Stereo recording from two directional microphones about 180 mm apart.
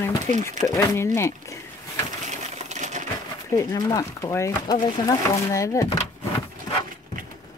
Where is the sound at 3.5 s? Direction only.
15° left (ahead or behind).